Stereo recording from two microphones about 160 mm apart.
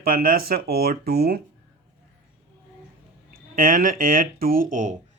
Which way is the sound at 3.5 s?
60° right (ahead or behind).